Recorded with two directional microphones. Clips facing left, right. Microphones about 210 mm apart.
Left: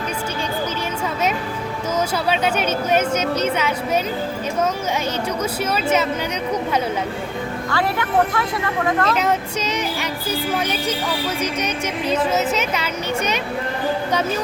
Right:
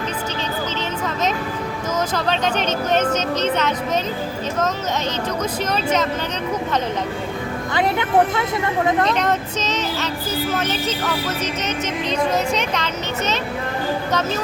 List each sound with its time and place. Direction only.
2.1 s speech: 10° left (ahead or behind)
5.4 s speech: 10° left (ahead or behind)
7.7 s speech: 20° right (ahead or behind)
9.0 s speech: 5° left (ahead or behind)